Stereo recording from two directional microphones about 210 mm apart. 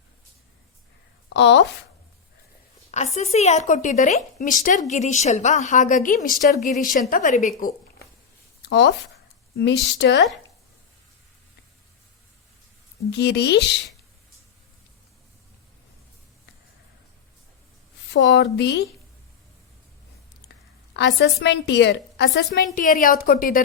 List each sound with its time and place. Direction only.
1.3 s a woman's voice: 55° left (ahead or behind)
2.9 s a woman's voice: 30° left (ahead or behind)
8.7 s speech: 50° left (ahead or behind)
13.1 s speech: 55° left (ahead or behind)
18.1 s speech: 55° left (ahead or behind)
20.9 s a woman's voice: 55° left (ahead or behind)